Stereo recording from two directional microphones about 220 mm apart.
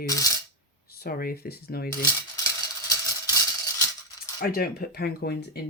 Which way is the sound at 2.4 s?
15° left (ahead or behind).